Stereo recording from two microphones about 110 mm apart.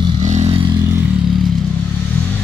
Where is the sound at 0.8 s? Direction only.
25° right (ahead or behind).